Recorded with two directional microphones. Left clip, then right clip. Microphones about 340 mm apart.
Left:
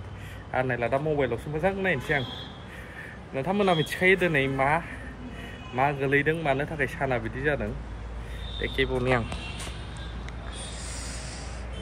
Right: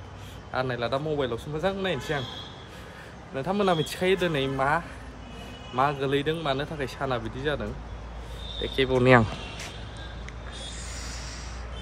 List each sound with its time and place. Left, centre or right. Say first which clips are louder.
0.5 s speech: left 2 dB; centre
3.3 s speech: left 1 dB; centre; by 9.2 s right